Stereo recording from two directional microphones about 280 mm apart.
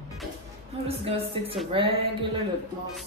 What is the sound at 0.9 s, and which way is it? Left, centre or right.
Speech, right.